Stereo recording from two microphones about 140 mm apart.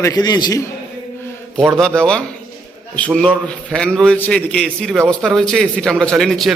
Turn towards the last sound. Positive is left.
turn(degrees=0)  # may be behind; listen again after turning